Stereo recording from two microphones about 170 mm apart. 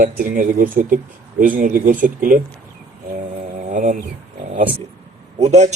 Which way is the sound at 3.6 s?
50° right (ahead or behind).